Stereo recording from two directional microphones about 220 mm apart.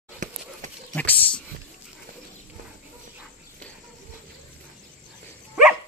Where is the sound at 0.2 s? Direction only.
35° right (ahead or behind).